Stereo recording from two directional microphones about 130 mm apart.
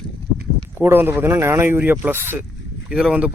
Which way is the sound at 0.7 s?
15° right (ahead or behind).